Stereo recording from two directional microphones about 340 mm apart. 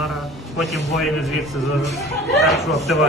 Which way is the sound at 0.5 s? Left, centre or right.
Centre.